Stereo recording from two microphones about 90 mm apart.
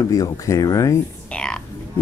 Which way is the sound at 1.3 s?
10° left (ahead or behind).